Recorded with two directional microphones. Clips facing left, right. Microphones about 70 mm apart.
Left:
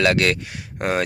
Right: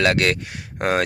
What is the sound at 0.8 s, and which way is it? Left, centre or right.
Speech, right.